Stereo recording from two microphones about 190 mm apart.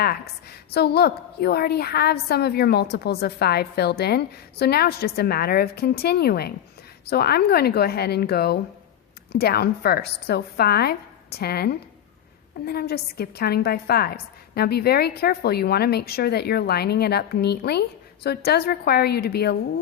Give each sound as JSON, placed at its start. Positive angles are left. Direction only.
{"t": 0.7, "sound": "a woman's voice", "side_deg": 55}